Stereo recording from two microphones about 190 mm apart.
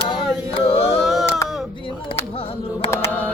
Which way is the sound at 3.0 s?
10° left (ahead or behind).